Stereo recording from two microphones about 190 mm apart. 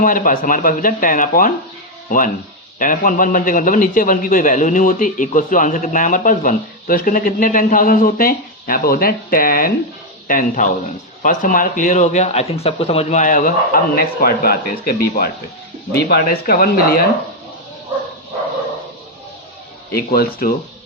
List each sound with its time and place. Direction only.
0.0 s a man's voice: 45° left (ahead or behind)
19.9 s a man's voice: 55° left (ahead or behind)